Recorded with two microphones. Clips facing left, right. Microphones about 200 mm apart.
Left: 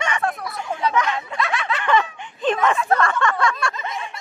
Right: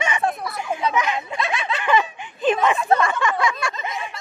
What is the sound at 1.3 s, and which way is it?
Snicker, 25° right (ahead or behind).